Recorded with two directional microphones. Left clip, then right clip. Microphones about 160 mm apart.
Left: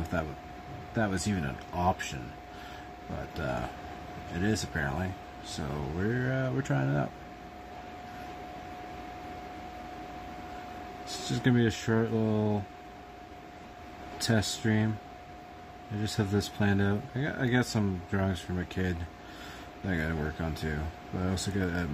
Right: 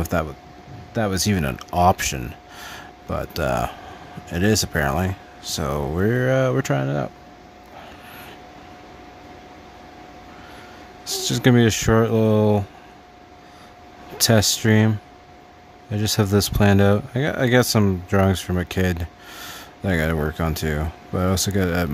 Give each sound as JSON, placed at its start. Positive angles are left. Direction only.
{"t": 0.1, "sound": "speech", "side_deg": -90}
{"t": 0.9, "sound": "speech", "side_deg": -65}
{"t": 3.3, "sound": "speech", "side_deg": -85}
{"t": 11.2, "sound": "speech", "side_deg": -90}
{"t": 14.1, "sound": "speech", "side_deg": -90}
{"t": 16.0, "sound": "speech", "side_deg": -90}